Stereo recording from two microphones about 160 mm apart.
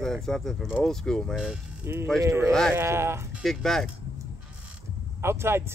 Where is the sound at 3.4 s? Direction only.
Centre (ahead or behind).